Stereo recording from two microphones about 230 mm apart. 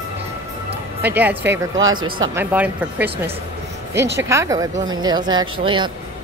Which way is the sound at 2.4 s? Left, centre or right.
Centre.